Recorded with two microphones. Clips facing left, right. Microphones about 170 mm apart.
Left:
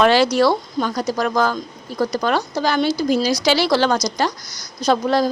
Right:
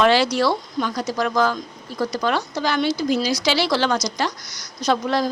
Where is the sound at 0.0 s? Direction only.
45° left (ahead or behind).